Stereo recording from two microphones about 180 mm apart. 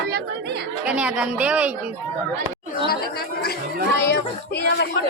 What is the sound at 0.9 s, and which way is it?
Speech, 5° right (ahead or behind).